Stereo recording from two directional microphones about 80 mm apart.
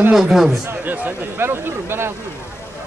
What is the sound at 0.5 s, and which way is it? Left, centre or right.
Speech, right.